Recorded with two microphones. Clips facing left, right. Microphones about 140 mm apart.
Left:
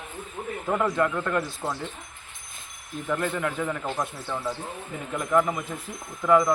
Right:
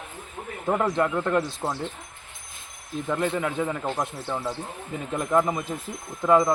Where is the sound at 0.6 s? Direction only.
20° right (ahead or behind).